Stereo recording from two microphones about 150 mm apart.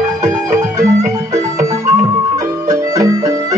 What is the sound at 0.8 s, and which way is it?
Music, 25° right (ahead or behind).